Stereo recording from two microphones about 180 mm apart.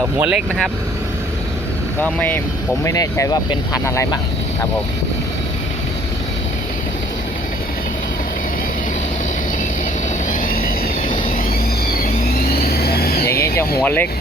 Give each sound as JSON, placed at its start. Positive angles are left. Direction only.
{"t": 0.0, "sound": "speech", "side_deg": -5}
{"t": 2.0, "sound": "speech", "side_deg": 10}
{"t": 10.2, "sound": "vehicle", "side_deg": 50}
{"t": 12.5, "sound": "vehicle", "side_deg": 60}
{"t": 13.2, "sound": "a sound", "side_deg": 15}
{"t": 13.8, "sound": "speech", "side_deg": 10}